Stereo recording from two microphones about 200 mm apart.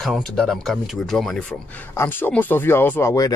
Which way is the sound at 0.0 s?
Centre (ahead or behind).